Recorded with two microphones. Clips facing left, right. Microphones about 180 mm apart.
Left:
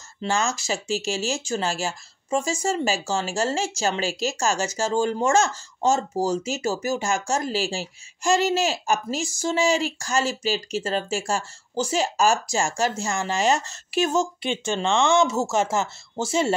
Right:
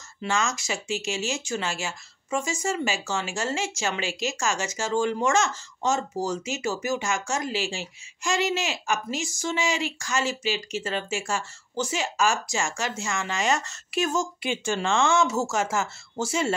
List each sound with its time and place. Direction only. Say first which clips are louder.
0.2 s speech: left 2 dB; 30° left (ahead or behind)
15.5 s speech: left 3 dB; 30° left (ahead or behind)